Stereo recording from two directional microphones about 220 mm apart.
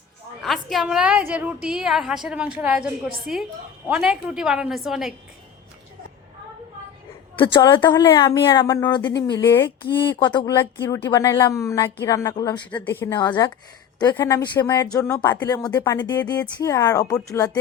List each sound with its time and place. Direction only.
0.4 s a woman's voice: centre (ahead or behind)
7.3 s speech: 20° left (ahead or behind)
9.8 s speech: 20° left (ahead or behind)